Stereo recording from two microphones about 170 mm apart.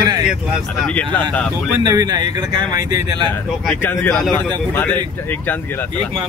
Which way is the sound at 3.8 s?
10° left (ahead or behind).